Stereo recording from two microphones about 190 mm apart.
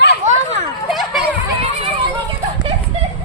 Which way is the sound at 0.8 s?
Centre (ahead or behind).